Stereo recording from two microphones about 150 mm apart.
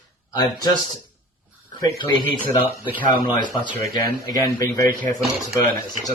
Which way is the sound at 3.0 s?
30° left (ahead or behind).